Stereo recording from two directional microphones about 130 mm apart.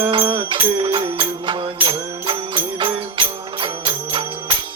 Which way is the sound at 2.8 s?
40° right (ahead or behind).